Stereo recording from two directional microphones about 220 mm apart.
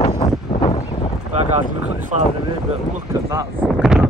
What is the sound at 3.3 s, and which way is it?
Speech, 10° right (ahead or behind).